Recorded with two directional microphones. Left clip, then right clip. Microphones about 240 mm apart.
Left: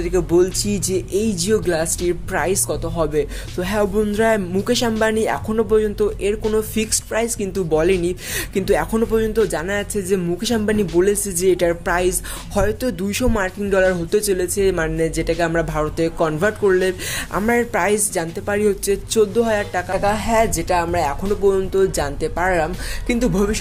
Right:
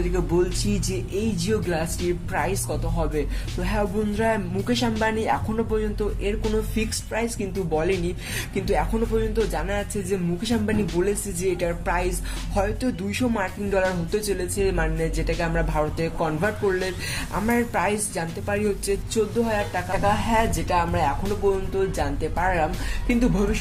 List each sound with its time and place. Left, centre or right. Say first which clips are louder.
0.1 s a woman's voice: left 9 dB; left